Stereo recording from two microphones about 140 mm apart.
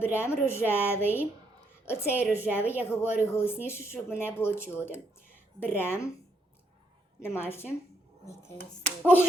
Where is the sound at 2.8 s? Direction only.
20° left (ahead or behind).